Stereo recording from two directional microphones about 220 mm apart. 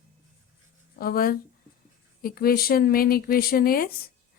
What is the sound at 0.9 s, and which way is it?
A woman's voice, 40° left (ahead or behind).